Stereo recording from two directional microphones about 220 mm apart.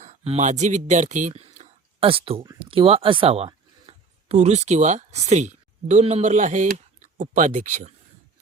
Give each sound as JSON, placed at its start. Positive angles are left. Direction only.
{"t": 0.0, "sound": "speech", "side_deg": -30}